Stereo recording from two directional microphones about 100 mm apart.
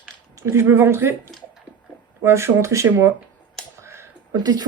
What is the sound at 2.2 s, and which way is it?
Speech, 25° right (ahead or behind).